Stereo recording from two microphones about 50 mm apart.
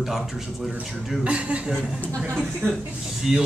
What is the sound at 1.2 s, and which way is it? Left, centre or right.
Speech, right.